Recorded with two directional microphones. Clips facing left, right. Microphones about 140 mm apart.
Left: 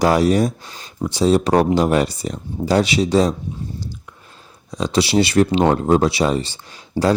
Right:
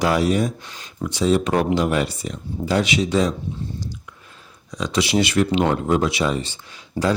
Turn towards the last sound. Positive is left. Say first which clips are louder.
# left 4 dB
turn(degrees=35)  # may be behind; listen again after turning